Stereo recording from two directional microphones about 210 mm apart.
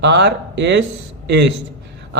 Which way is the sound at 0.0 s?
55° right (ahead or behind).